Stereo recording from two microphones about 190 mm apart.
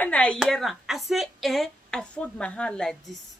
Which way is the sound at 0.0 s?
5° left (ahead or behind).